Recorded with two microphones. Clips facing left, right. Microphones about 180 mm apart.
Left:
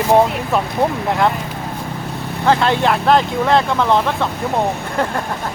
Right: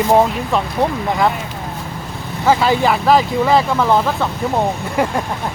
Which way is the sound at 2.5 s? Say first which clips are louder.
Right 1 dB; 5° right (ahead or behind).